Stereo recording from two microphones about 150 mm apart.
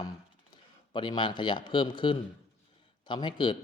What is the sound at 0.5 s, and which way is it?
A man's voice, 30° left (ahead or behind).